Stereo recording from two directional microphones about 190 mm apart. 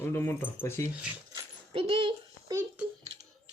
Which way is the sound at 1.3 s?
25° right (ahead or behind).